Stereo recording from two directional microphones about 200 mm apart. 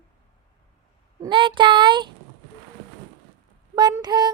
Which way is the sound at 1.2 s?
25° right (ahead or behind).